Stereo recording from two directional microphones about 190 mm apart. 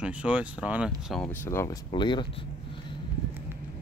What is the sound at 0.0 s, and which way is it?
Speech, 5° right (ahead or behind).